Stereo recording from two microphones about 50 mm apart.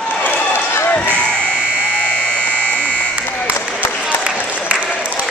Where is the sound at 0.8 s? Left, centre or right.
Left.